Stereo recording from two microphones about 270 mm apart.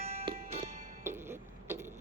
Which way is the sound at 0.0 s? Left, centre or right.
Right.